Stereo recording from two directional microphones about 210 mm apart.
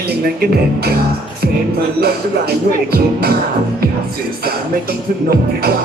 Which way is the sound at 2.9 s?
45° right (ahead or behind).